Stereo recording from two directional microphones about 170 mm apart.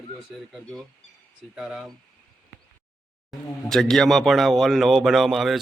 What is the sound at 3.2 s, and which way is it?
Speech, 5° left (ahead or behind).